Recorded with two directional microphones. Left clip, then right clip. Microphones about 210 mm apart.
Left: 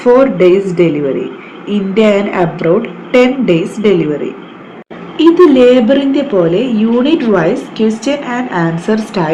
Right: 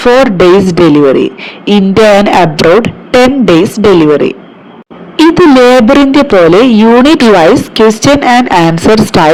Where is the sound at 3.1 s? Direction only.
40° right (ahead or behind).